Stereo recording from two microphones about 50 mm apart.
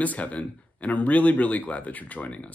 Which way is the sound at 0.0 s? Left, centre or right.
Left.